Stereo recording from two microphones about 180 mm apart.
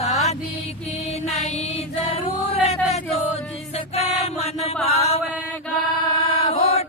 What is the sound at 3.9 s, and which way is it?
Chant, 35° left (ahead or behind).